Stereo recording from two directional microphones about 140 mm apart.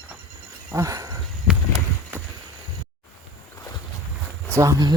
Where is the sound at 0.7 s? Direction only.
25° right (ahead or behind).